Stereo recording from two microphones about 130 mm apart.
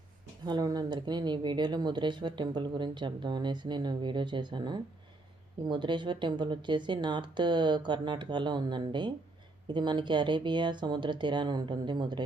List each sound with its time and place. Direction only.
0.4 s speech: 35° right (ahead or behind)